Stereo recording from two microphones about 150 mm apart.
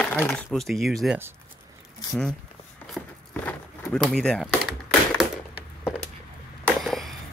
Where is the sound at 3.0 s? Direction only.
5° right (ahead or behind).